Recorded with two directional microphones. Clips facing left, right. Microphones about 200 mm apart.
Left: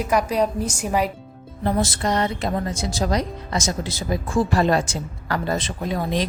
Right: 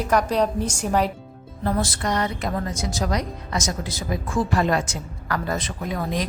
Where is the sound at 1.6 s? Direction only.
25° left (ahead or behind).